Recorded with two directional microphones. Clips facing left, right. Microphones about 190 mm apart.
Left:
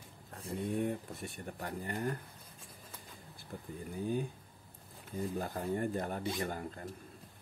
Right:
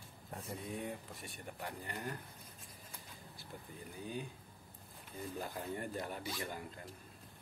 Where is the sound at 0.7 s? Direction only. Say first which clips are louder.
Left 8 dB; 55° left (ahead or behind).